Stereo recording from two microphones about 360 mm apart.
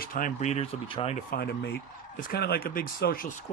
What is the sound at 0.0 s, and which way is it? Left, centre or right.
Speech, left.